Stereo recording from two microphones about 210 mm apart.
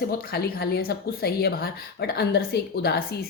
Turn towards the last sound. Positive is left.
turn(degrees=50)  # may be behind; listen again after turning